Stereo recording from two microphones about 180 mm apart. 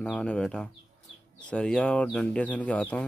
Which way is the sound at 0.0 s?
5° left (ahead or behind).